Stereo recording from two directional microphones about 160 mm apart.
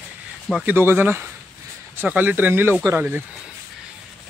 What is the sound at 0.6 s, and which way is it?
Speech, 15° right (ahead or behind).